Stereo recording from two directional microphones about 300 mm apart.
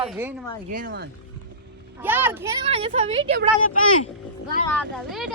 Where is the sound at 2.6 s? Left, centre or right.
Centre.